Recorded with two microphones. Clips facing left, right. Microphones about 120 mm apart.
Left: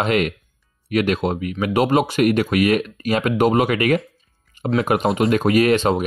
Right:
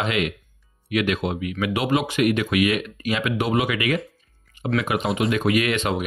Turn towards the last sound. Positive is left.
turn(degrees=35)  # may be behind; listen again after turning